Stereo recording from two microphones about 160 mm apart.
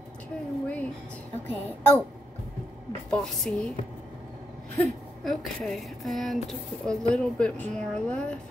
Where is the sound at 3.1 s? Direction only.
5° left (ahead or behind).